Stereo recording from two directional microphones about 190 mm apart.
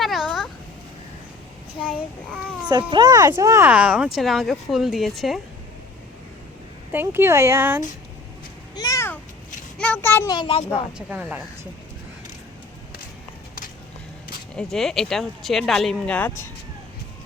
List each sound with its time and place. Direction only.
0.0 s cat: centre (ahead or behind)
1.8 s a child's voice: 5° left (ahead or behind)
2.6 s speech: 20° right (ahead or behind); by 5.4 s centre (ahead or behind)
6.9 s speech: 10° right (ahead or behind)
8.7 s a sound: 20° left (ahead or behind)
10.3 s a child's voice: 30° left (ahead or behind)
10.9 s speech: 5° right (ahead or behind)
14.5 s speech: centre (ahead or behind)